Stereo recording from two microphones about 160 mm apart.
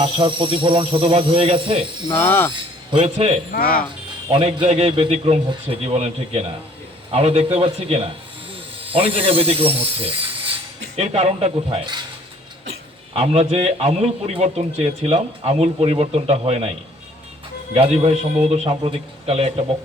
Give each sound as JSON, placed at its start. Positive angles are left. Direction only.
{"t": 0.0, "sound": "a man's voice", "side_deg": -30}
{"t": 2.0, "sound": "speech", "side_deg": 15}
{"t": 2.5, "sound": "speech", "side_deg": -35}
{"t": 3.5, "sound": "speech", "side_deg": 65}
{"t": 4.3, "sound": "a man's voice", "side_deg": -35}
{"t": 13.1, "sound": "a man's voice", "side_deg": -40}
{"t": 17.7, "sound": "a man's voice", "side_deg": -40}